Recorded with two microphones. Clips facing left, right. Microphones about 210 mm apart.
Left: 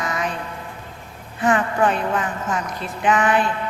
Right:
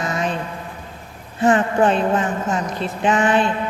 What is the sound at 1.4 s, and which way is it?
Speech, 30° right (ahead or behind).